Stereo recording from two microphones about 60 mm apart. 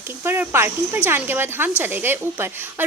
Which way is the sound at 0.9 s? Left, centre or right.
Right.